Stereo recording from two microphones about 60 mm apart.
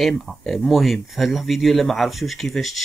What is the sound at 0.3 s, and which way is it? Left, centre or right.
Speech, centre.